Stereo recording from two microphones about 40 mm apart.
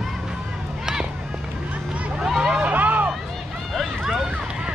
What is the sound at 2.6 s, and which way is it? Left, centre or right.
Hubbub, right.